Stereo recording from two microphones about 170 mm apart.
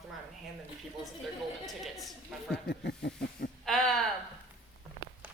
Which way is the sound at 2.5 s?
70° left (ahead or behind).